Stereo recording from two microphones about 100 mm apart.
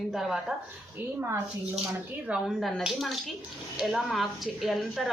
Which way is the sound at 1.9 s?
10° right (ahead or behind).